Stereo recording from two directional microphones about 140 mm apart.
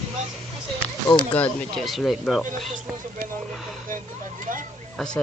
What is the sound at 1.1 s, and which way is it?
Speech, 10° left (ahead or behind).